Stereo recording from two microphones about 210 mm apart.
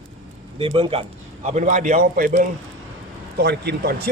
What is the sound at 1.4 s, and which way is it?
A man's voice, 35° right (ahead or behind).